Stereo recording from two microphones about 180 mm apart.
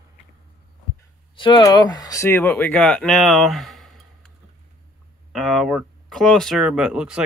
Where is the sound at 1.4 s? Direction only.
25° left (ahead or behind); by 4.0 s centre (ahead or behind).